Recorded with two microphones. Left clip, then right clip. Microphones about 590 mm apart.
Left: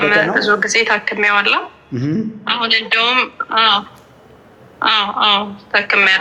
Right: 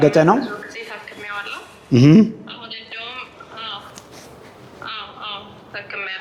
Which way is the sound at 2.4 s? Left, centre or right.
Left.